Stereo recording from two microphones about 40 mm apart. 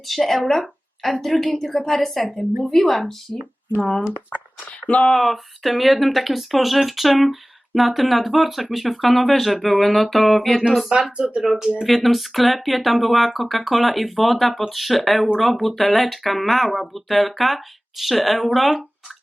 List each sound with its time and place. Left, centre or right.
0.0 s a woman's voice: centre
3.8 s speech: left
4.8 s speech: left
5.0 s speech: centre
11.2 s speech: right
11.4 s speech: centre
11.9 s speech: centre